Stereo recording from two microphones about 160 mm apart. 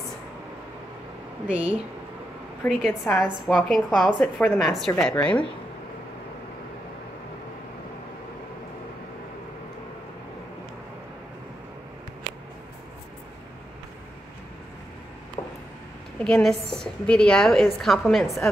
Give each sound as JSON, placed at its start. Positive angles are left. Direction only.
{"t": 1.5, "sound": "a woman's voice", "side_deg": -10}
{"t": 15.4, "sound": "a sound", "side_deg": 25}
{"t": 16.2, "sound": "a woman's voice", "side_deg": 5}